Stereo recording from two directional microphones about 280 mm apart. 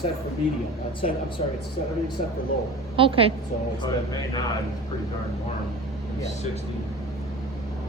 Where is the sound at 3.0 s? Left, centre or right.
Centre.